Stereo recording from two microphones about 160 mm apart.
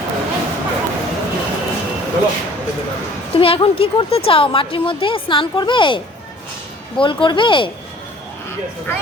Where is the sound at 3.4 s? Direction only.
35° left (ahead or behind).